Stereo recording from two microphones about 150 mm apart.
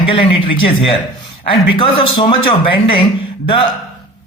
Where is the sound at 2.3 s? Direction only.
35° left (ahead or behind).